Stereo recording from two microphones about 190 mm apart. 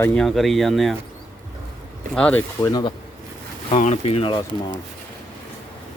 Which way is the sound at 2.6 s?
20° left (ahead or behind).